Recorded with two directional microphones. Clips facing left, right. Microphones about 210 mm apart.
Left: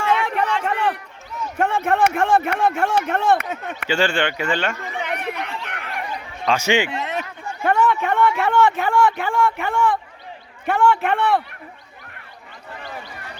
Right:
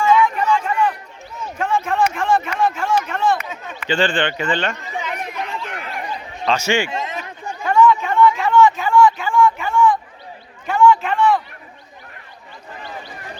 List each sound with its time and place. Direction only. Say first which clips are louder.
0.0 s a sound: right 4 dB; 65° left (ahead or behind)
1.5 s a man's voice: even; 65° left (ahead or behind)
3.8 s speech: right 1 dB; 10° left (ahead or behind)
4.9 s chatter: even; 65° left (ahead or behind)
6.5 s speech: even; 15° left (ahead or behind)
7.0 s a sound: left 1 dB; 65° left (ahead or behind)
10.7 s a man's voice: right 3 dB; 60° left (ahead or behind)